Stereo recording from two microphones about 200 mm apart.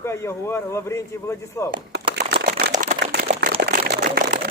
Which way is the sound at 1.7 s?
55° right (ahead or behind).